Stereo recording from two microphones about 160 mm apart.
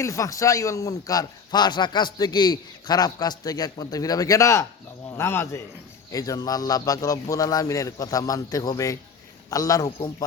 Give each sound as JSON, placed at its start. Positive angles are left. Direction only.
{"t": 0.0, "sound": "a man's voice", "side_deg": 20}